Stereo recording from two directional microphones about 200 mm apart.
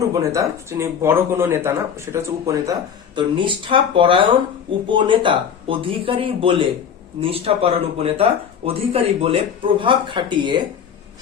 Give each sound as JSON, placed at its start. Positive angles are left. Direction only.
{"t": 0.1, "sound": "speech", "side_deg": -15}
{"t": 3.2, "sound": "speech", "side_deg": -25}